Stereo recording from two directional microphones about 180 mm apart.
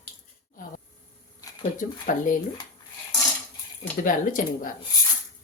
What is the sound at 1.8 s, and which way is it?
Speech, 45° left (ahead or behind).